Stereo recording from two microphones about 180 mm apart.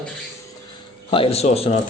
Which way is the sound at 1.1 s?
30° left (ahead or behind).